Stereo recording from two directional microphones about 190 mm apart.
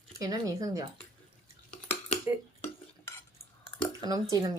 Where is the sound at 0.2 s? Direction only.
20° right (ahead or behind).